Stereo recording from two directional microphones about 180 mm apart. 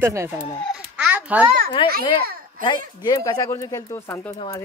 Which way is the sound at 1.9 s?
55° right (ahead or behind).